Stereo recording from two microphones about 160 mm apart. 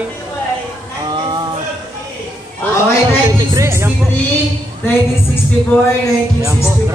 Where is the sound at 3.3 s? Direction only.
20° right (ahead or behind).